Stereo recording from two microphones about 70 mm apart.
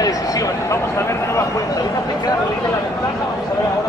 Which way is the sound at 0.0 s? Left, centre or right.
Left.